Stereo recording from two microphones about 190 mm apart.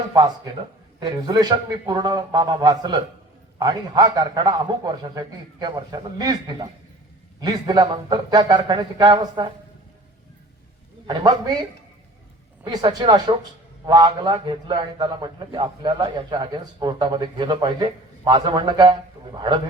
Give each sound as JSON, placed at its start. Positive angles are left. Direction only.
{"t": 0.9, "sound": "a man's voice", "side_deg": -20}
{"t": 11.0, "sound": "a man's voice", "side_deg": -20}
{"t": 12.6, "sound": "a man's voice", "side_deg": -20}